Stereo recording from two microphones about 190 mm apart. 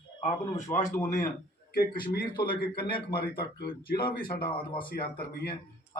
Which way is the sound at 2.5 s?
55° left (ahead or behind).